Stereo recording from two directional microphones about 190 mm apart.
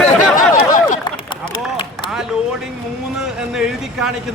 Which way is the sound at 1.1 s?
25° left (ahead or behind).